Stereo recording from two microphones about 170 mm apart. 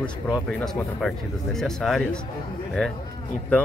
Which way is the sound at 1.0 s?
5° left (ahead or behind).